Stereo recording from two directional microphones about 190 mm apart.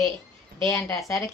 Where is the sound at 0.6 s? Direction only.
15° left (ahead or behind).